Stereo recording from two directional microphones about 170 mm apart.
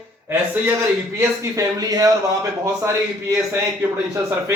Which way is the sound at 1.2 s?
20° right (ahead or behind).